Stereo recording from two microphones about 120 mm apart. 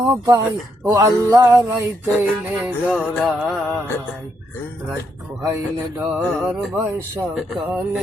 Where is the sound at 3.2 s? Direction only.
Centre (ahead or behind).